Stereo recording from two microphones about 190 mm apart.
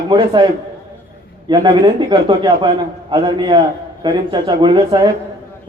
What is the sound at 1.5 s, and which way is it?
A man's voice, 25° right (ahead or behind).